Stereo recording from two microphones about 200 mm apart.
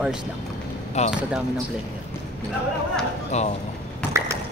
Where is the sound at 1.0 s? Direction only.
35° left (ahead or behind).